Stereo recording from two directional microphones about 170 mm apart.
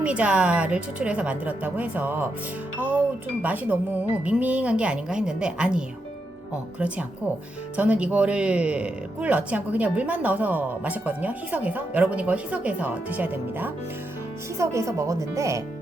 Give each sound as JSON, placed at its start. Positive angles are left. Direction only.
{"t": 0.0, "sound": "speech", "side_deg": -5}
{"t": 3.4, "sound": "speech", "side_deg": -10}